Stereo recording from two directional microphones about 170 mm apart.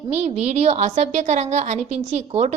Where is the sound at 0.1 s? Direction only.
40° right (ahead or behind).